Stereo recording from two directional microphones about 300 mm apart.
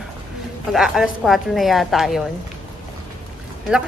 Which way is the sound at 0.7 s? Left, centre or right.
Centre.